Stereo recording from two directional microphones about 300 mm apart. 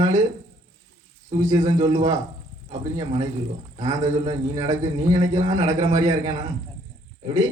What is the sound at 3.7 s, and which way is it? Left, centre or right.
A man's voice, right.